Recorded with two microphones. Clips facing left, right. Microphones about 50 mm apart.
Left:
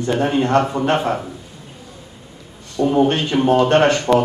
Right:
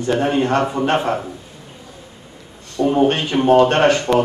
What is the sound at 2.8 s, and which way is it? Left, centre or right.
Speech, centre.